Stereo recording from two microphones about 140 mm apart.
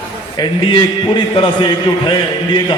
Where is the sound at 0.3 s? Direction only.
35° left (ahead or behind).